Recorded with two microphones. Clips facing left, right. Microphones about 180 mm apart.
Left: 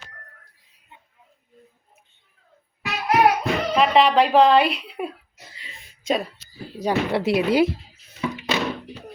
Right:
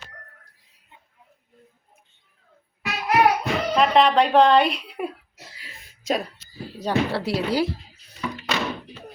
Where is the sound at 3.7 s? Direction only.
5° left (ahead or behind).